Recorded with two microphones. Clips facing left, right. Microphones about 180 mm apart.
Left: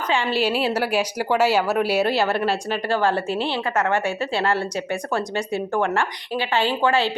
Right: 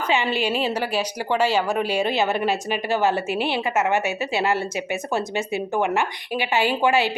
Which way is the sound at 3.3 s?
10° right (ahead or behind).